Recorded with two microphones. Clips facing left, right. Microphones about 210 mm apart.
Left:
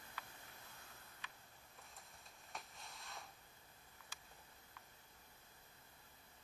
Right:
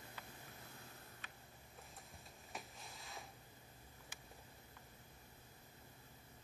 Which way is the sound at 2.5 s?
Centre (ahead or behind).